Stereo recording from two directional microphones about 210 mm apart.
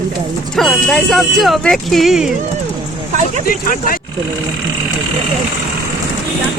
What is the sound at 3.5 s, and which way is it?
Speech, 40° left (ahead or behind).